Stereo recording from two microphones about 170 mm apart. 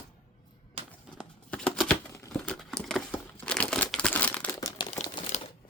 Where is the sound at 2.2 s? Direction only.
10° left (ahead or behind).